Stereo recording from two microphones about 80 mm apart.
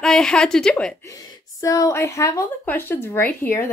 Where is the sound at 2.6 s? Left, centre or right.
Left.